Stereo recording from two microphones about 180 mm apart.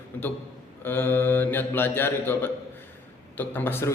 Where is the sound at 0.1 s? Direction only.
10° left (ahead or behind).